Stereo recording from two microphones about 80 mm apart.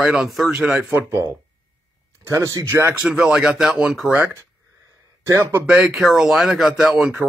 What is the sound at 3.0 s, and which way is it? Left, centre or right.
Speech, centre.